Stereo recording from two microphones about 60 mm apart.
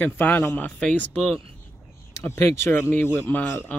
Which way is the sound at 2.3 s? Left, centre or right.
Left.